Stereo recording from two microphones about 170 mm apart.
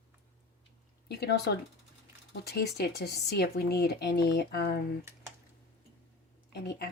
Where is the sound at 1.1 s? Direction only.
75° left (ahead or behind).